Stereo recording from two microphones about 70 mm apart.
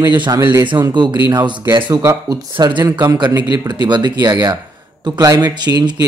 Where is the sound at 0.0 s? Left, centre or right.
Right.